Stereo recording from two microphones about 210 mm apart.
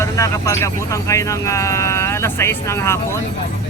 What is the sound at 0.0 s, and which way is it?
Speech, 15° left (ahead or behind).